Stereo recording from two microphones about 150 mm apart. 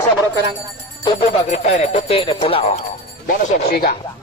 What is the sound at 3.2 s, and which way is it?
Speech, 75° left (ahead or behind).